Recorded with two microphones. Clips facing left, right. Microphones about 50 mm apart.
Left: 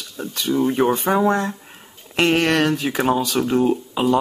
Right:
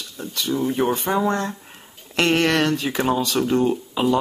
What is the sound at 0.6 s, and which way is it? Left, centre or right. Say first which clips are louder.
Speech: left 4 dB; left.